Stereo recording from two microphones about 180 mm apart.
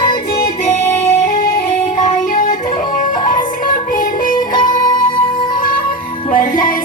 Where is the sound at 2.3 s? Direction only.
50° left (ahead or behind).